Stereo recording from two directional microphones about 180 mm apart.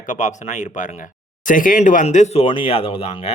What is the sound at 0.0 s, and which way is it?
Speech, 45° left (ahead or behind).